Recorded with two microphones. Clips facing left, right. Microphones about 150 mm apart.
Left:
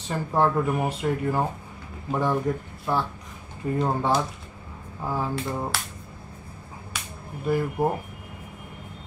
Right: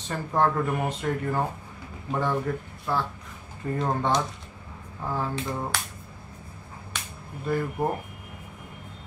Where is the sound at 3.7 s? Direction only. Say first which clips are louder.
Left 2 dB; 10° left (ahead or behind).